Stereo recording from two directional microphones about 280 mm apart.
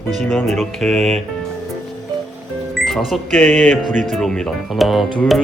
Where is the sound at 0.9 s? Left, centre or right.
Right.